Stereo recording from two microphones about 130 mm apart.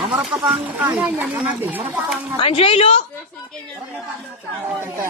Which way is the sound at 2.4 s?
45° left (ahead or behind).